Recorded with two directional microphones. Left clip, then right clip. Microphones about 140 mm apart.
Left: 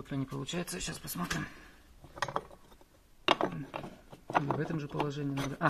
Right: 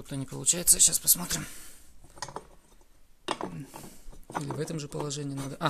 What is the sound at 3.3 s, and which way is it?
Mechanisms, 15° left (ahead or behind).